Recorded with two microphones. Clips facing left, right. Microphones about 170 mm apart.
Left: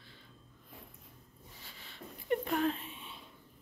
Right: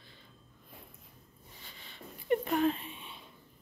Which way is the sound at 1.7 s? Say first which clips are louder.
Even; centre (ahead or behind).